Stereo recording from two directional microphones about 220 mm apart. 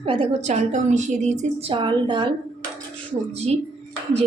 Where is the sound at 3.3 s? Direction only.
30° right (ahead or behind).